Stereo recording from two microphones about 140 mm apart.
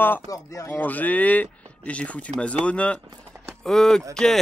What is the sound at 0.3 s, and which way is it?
Speech, 20° left (ahead or behind).